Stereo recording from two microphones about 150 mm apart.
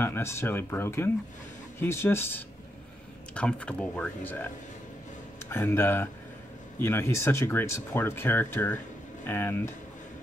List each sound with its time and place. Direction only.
0.0 s speech: 15° left (ahead or behind)
5.5 s speech: 15° left (ahead or behind)